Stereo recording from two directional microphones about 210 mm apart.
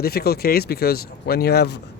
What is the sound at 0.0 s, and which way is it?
Speech, 50° left (ahead or behind).